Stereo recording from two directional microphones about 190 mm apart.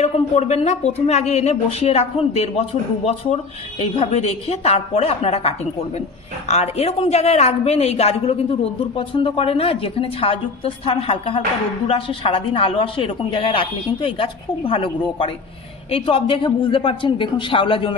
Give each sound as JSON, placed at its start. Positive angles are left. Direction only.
{"t": 0.0, "sound": "a woman's voice", "side_deg": 35}